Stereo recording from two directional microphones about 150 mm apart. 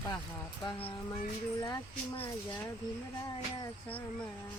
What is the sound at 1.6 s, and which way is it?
Speech, 25° left (ahead or behind).